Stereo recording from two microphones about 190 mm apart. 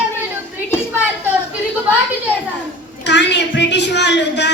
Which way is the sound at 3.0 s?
65° left (ahead or behind).